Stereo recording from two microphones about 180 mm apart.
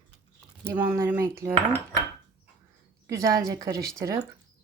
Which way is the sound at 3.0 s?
20° right (ahead or behind).